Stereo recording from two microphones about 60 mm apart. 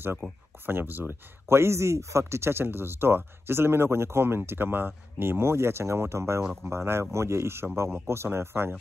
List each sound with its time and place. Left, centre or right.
0.2 s speech: centre
0.7 s speech: right